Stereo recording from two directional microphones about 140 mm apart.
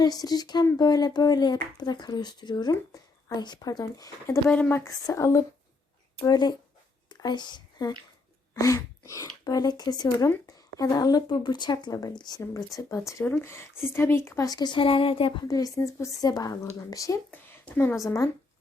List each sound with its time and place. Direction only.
0.0 s speech: 30° left (ahead or behind)
4.4 s speech: 10° left (ahead or behind)
4.8 s speech: 25° left (ahead or behind); by 15.4 s 40° left (ahead or behind)
15.4 s speech: 25° left (ahead or behind)
17.3 s a sound: 15° left (ahead or behind)
18.0 s speech: 20° left (ahead or behind)